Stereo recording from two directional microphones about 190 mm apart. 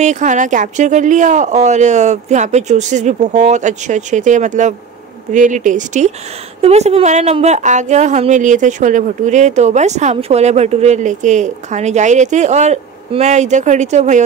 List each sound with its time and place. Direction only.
0.0 s a woman's voice: 40° right (ahead or behind)